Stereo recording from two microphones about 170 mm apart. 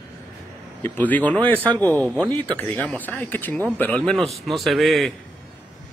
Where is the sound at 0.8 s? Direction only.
10° left (ahead or behind).